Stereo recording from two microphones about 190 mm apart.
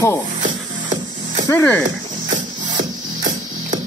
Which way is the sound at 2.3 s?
40° right (ahead or behind).